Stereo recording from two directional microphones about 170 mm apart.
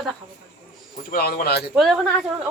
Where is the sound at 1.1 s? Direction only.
60° left (ahead or behind).